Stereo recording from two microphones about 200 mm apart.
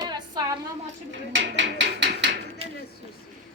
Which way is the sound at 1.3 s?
65° right (ahead or behind).